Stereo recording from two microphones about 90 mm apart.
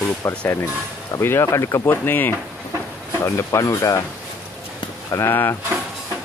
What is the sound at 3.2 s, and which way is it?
Speech, 35° left (ahead or behind).